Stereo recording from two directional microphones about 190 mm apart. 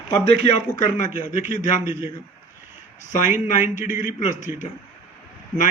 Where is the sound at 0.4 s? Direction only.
40° left (ahead or behind).